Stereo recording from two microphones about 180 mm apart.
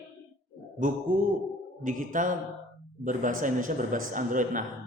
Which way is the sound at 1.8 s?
45° right (ahead or behind).